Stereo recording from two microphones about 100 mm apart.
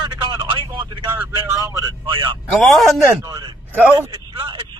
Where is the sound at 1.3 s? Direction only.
40° right (ahead or behind).